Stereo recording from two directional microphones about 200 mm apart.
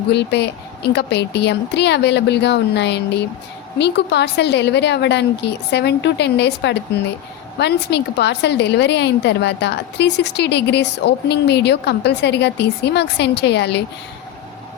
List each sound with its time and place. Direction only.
0.1 s a woman's voice: 55° left (ahead or behind)